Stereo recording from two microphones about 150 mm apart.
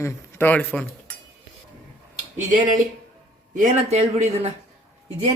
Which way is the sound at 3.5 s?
50° right (ahead or behind).